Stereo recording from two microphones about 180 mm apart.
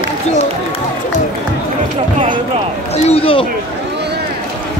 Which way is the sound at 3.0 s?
30° left (ahead or behind).